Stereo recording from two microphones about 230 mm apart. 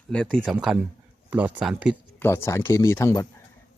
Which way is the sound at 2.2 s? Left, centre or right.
Centre.